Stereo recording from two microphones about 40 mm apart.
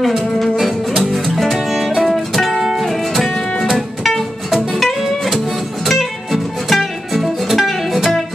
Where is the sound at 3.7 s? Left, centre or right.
Centre.